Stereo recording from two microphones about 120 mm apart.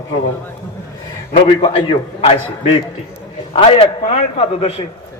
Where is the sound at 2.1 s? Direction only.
60° left (ahead or behind).